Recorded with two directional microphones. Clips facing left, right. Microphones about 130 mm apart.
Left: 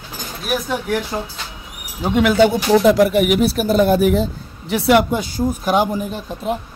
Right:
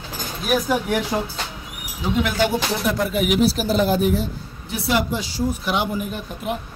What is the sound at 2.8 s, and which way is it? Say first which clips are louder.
Speech: left 9 dB; 85° left.